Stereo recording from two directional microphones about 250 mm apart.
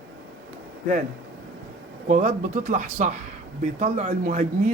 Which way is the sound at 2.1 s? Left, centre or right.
Right.